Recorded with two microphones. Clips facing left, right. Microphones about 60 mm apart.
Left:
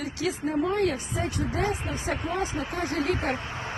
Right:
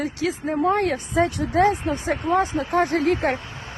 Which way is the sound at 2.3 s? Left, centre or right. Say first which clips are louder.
Right 9 dB; right.